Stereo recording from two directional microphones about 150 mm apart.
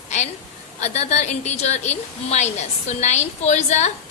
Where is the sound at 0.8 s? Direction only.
45° left (ahead or behind).